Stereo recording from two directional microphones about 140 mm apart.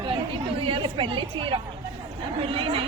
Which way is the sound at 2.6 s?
40° right (ahead or behind).